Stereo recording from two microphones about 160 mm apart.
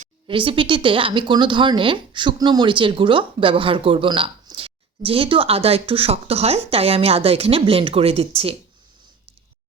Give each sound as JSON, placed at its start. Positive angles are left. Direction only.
{"t": 0.3, "sound": "speech", "side_deg": -30}